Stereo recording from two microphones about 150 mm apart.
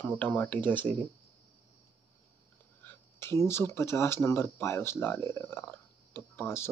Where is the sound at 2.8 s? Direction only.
15° left (ahead or behind).